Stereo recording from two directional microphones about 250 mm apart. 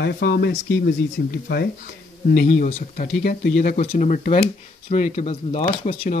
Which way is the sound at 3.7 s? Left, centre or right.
Left.